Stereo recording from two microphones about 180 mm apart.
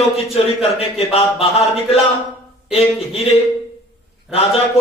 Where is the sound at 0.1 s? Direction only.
35° left (ahead or behind).